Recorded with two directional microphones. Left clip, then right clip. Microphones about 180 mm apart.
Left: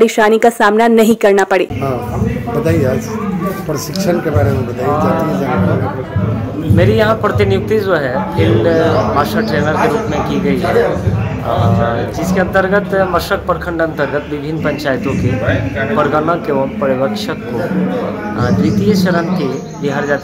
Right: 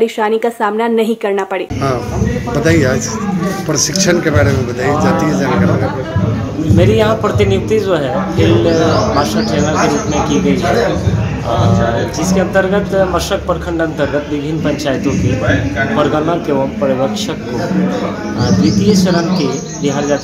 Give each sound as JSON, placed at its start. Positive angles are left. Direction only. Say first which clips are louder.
{"t": 0.0, "sound": "a woman's voice", "louder": "left 4 dB", "side_deg": 35}
{"t": 2.6, "sound": "speech", "louder": "right 3 dB", "side_deg": 5}
{"t": 4.8, "sound": "speech", "louder": "even", "side_deg": 5}
{"t": 6.8, "sound": "speech", "louder": "even", "side_deg": 5}
{"t": 9.2, "sound": "speech", "louder": "even", "side_deg": 10}
{"t": 12.4, "sound": "speech", "louder": "left 1 dB", "side_deg": 10}
{"t": 18.4, "sound": "speech", "louder": "right 1 dB", "side_deg": 5}